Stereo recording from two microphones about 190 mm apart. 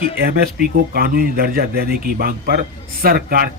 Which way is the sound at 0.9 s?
50° right (ahead or behind).